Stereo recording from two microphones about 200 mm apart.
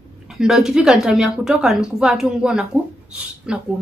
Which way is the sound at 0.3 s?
Centre (ahead or behind).